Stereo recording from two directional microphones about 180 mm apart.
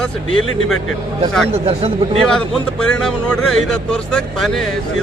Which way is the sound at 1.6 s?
35° right (ahead or behind).